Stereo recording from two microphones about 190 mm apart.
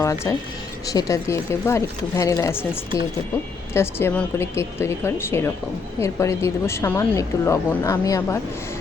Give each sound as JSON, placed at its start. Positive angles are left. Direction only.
{"t": 0.0, "sound": "a woman's voice", "side_deg": 15}
{"t": 3.8, "sound": "a woman's voice", "side_deg": 10}